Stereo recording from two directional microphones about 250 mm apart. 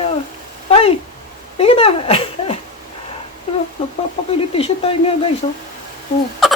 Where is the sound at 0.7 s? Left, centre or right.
Left.